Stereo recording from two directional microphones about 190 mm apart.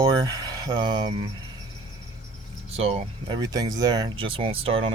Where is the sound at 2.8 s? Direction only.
30° right (ahead or behind).